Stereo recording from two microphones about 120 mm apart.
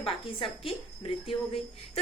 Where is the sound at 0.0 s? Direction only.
45° left (ahead or behind).